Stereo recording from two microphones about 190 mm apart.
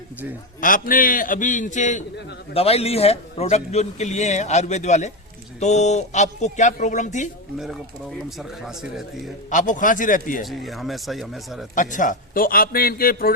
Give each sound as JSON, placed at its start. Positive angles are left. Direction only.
{"t": 0.6, "sound": "a man's voice", "side_deg": 45}
{"t": 8.4, "sound": "speech", "side_deg": 0}
{"t": 9.5, "sound": "a man's voice", "side_deg": 40}
{"t": 10.4, "sound": "speech", "side_deg": 0}
{"t": 11.7, "sound": "a man's voice", "side_deg": 45}